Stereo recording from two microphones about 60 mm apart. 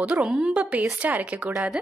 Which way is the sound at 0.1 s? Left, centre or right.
Centre.